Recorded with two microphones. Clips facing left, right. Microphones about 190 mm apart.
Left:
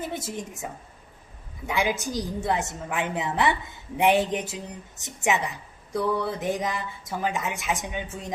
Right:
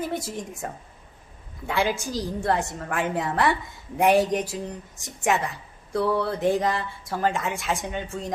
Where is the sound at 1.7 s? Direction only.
15° left (ahead or behind).